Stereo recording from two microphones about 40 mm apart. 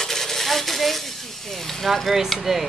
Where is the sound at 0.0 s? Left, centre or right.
Centre.